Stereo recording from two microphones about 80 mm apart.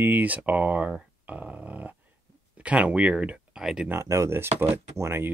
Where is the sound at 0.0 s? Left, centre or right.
Right.